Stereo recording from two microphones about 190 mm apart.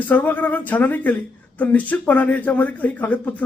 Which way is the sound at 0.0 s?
10° left (ahead or behind).